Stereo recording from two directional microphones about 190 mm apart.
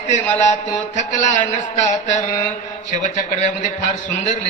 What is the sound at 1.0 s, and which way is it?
A man's voice, 40° left (ahead or behind).